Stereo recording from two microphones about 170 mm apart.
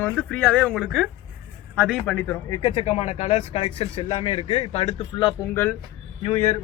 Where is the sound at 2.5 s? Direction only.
30° left (ahead or behind).